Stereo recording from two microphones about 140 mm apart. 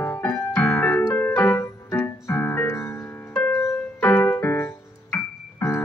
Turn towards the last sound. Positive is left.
turn(degrees=15)  # may be behind; listen again after turning